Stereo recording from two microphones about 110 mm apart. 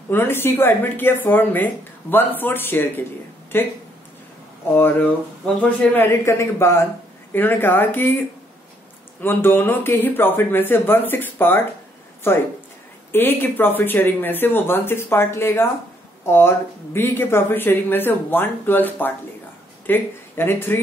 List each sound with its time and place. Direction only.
0.1 s speech: 20° left (ahead or behind)
9.2 s speech: 20° left (ahead or behind)
13.1 s speech: 20° left (ahead or behind)